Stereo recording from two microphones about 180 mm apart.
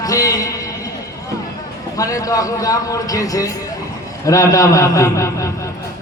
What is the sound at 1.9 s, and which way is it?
A man's voice, 20° left (ahead or behind).